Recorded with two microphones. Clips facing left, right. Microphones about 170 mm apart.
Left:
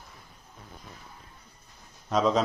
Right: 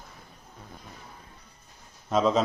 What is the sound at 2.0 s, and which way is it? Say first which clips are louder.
Speech: right 1 dB; centre (ahead or behind).